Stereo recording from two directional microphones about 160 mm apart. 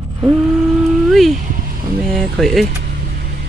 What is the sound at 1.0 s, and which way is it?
Speech, centre (ahead or behind).